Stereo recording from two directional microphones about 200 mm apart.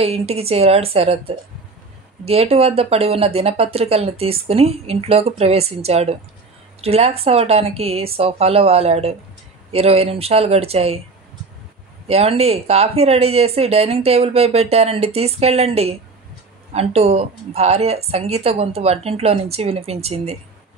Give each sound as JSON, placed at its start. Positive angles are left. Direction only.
{"t": 0.0, "sound": "a woman's voice", "side_deg": -30}
{"t": 12.1, "sound": "speech", "side_deg": -30}